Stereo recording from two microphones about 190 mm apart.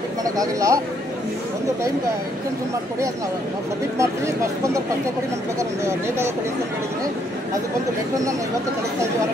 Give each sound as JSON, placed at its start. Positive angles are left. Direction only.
{"t": 0.2, "sound": "speech", "side_deg": -20}
{"t": 4.0, "sound": "speech", "side_deg": -15}